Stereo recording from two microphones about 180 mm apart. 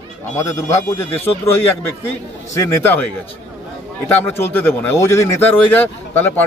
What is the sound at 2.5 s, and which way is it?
Speech, 15° left (ahead or behind).